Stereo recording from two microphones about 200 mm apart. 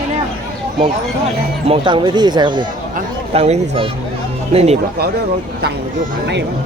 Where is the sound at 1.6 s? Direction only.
25° right (ahead or behind).